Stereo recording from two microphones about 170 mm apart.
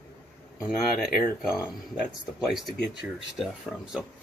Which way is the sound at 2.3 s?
Centre (ahead or behind).